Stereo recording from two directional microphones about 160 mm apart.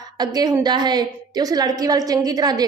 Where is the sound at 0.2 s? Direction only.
25° right (ahead or behind).